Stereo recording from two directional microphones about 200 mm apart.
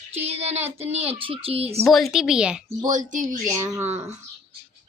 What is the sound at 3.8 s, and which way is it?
Speech, 35° right (ahead or behind).